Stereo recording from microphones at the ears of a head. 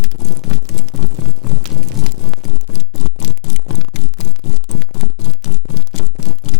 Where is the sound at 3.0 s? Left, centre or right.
Left.